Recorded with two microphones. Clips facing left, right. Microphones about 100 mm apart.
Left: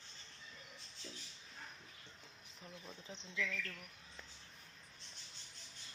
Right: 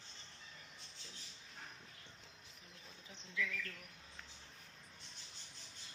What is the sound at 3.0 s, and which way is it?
Speech, 25° left (ahead or behind).